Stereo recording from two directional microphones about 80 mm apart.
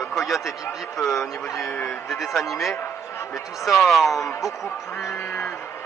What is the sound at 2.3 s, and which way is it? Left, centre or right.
A man's voice, centre.